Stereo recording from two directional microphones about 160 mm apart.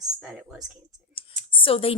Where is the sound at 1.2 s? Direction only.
35° left (ahead or behind).